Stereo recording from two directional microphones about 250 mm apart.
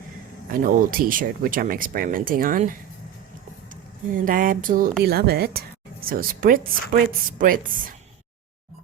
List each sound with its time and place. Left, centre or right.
0.5 s speech: right
4.1 s speech: right